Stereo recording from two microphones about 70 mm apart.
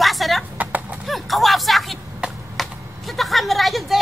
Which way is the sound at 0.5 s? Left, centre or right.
Right.